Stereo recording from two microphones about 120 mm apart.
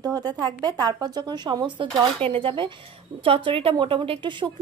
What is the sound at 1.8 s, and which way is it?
A woman's voice, 50° right (ahead or behind).